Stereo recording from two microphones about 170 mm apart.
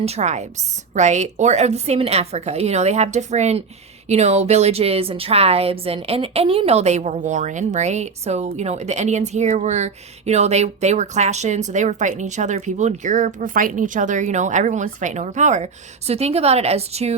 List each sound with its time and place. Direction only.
0.0 s a woman's voice: 40° right (ahead or behind)